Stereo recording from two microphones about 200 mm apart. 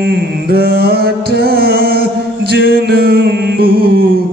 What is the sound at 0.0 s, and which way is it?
Music, 50° right (ahead or behind).